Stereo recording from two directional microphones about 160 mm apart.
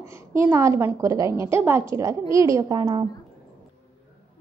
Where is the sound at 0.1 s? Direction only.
15° right (ahead or behind).